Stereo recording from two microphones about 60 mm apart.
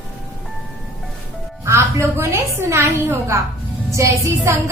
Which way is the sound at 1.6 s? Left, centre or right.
Right.